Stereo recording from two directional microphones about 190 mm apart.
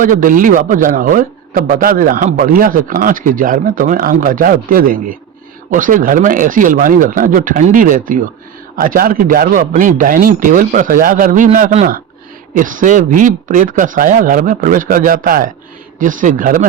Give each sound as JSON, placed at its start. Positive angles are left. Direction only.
{"t": 0.0, "sound": "a man's voice", "side_deg": -45}